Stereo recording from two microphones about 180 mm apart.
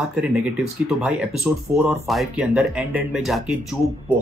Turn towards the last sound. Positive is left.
turn(degrees=-5)  # may be behind; listen again after turning